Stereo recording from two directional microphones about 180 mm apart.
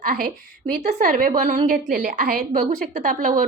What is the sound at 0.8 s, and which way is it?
Speech, 40° right (ahead or behind).